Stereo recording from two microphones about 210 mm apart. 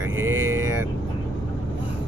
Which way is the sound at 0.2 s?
10° right (ahead or behind).